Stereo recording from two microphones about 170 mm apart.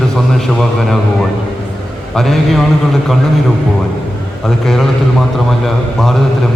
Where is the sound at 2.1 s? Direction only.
Centre (ahead or behind).